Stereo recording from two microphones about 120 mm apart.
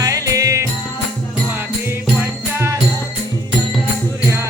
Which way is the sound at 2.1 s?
20° right (ahead or behind).